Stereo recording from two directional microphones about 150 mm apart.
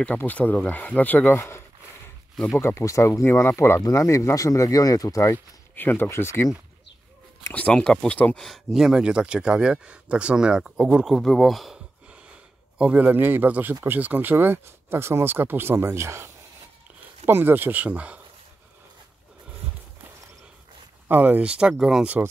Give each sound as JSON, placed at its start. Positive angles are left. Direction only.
{"t": 0.0, "sound": "speech", "side_deg": 10}
{"t": 2.3, "sound": "speech", "side_deg": 0}
{"t": 2.6, "sound": "speech", "side_deg": 20}
{"t": 17.3, "sound": "speech", "side_deg": -15}
{"t": 21.1, "sound": "speech", "side_deg": -10}